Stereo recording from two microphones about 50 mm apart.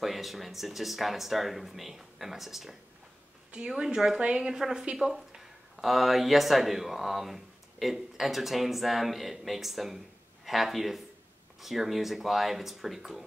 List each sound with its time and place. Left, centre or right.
0.0 s a woman's voice: centre